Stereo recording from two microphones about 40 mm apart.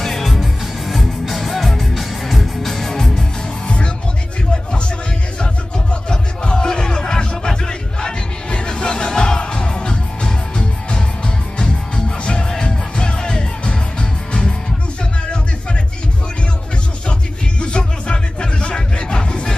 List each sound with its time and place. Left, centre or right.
0.0 s music: centre
5.4 s music: left
12.3 s music: centre
17.6 s music: left